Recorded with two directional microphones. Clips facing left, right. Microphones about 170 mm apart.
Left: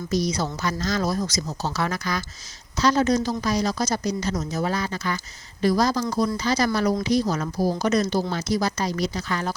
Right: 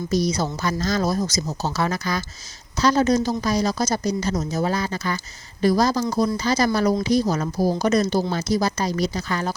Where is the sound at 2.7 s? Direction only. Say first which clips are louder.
Right 2 dB; 40° right (ahead or behind).